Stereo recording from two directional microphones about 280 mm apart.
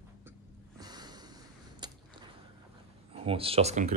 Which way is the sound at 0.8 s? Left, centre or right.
Centre.